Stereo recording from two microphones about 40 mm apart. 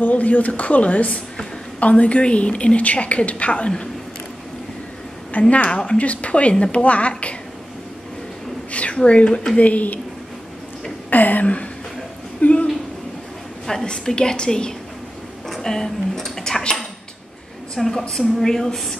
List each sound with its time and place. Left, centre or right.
0.0 s a woman's voice: left
5.5 s a woman's voice: left
8.7 s speech: left
9.6 s a woman's voice: left
11.1 s speech: left
12.4 s a sound: left
13.7 s a woman's voice: centre
15.4 s a sound: centre
17.7 s speech: centre